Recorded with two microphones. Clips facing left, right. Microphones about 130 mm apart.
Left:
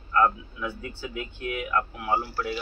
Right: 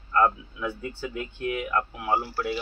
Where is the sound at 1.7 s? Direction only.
10° right (ahead or behind).